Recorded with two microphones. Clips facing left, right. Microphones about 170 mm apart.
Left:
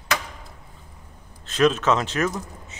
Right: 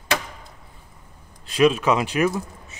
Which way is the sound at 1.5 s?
10° right (ahead or behind).